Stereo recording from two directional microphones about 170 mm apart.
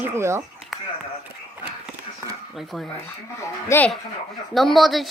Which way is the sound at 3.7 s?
15° left (ahead or behind).